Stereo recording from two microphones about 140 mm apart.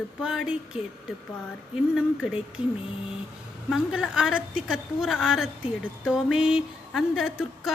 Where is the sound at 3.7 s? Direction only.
5° right (ahead or behind).